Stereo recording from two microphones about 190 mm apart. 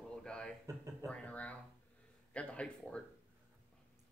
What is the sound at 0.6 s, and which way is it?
Speech, 15° right (ahead or behind).